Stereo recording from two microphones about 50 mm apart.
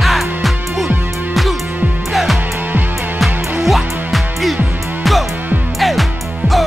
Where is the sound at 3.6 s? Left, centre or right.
Centre.